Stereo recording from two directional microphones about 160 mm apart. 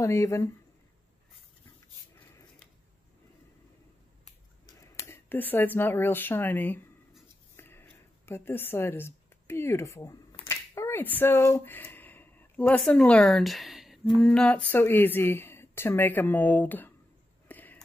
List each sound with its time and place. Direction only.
0.0 s speech: 20° left (ahead or behind)
4.7 s speech: 20° left (ahead or behind)
17.5 s a sound: 10° left (ahead or behind)